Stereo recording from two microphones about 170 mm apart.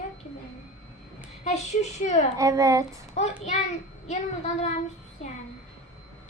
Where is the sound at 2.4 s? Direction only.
20° right (ahead or behind).